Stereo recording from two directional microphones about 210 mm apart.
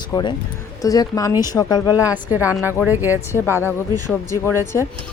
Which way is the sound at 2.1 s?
10° right (ahead or behind).